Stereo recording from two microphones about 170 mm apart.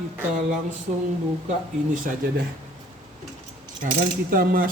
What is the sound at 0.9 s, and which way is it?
Speech, 45° right (ahead or behind).